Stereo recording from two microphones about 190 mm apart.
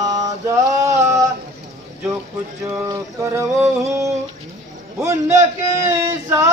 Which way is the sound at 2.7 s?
15° right (ahead or behind).